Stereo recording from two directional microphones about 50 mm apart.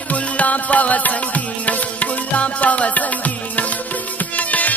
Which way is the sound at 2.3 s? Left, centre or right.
Left.